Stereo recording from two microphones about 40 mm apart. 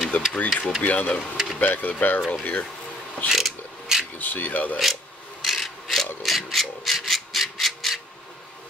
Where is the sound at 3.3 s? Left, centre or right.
Centre.